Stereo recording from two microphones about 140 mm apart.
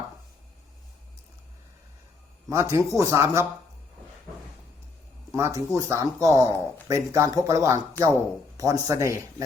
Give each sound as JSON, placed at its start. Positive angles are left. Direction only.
{"t": 2.5, "sound": "speech", "side_deg": -20}
{"t": 5.3, "sound": "speech", "side_deg": -25}
{"t": 8.0, "sound": "speech", "side_deg": 15}
{"t": 8.5, "sound": "speech", "side_deg": -25}